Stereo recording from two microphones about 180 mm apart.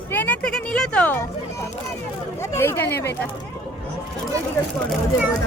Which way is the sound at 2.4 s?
15° left (ahead or behind).